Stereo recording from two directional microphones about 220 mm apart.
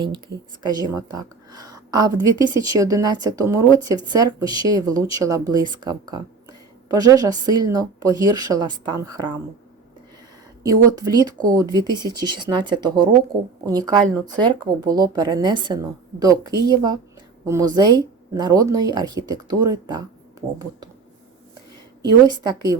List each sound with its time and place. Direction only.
0.9 s speech: 15° right (ahead or behind)
10.6 s speech: 15° right (ahead or behind)
22.3 s speech: 15° right (ahead or behind)